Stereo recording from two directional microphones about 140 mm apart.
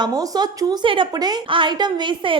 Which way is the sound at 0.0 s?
30° right (ahead or behind).